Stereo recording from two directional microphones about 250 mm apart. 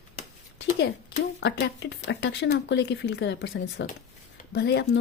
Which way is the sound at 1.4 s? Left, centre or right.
Left.